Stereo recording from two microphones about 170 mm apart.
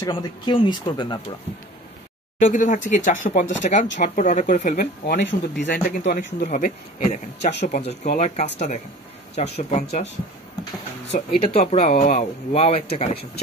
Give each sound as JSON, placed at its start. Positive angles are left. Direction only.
{"t": 0.0, "sound": "speech", "side_deg": 25}
{"t": 2.3, "sound": "speech", "side_deg": 45}
{"t": 5.1, "sound": "speech", "side_deg": 90}
{"t": 5.9, "sound": "speech", "side_deg": 50}
{"t": 11.1, "sound": "speech", "side_deg": 40}